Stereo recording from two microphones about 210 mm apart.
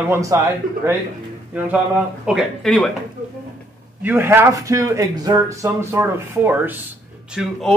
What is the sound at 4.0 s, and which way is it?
A man's voice, 10° right (ahead or behind).